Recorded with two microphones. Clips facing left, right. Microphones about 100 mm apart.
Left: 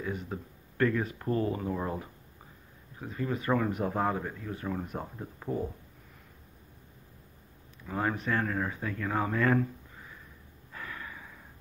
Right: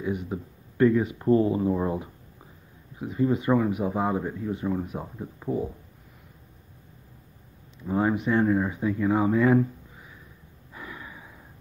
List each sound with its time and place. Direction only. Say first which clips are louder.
0.0 s speech: right 6 dB; 15° right (ahead or behind)
7.8 s speech: right 7 dB; 20° right (ahead or behind)
10.7 s a sound: right 1 dB; 15° right (ahead or behind)